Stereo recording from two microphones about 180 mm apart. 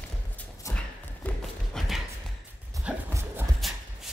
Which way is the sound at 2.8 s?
15° right (ahead or behind).